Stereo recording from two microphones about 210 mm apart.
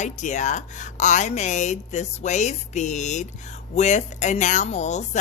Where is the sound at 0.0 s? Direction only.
35° left (ahead or behind).